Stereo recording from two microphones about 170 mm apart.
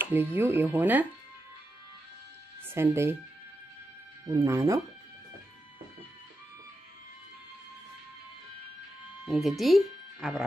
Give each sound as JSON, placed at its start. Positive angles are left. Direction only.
{"t": 0.0, "sound": "speech", "side_deg": -10}
{"t": 2.7, "sound": "speech", "side_deg": -15}
{"t": 4.3, "sound": "speech", "side_deg": -20}
{"t": 9.2, "sound": "speech", "side_deg": 0}